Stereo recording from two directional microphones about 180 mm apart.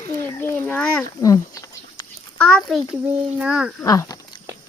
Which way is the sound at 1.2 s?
20° left (ahead or behind).